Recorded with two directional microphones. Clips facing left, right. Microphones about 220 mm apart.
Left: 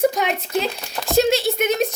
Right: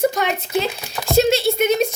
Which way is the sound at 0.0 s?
15° left (ahead or behind).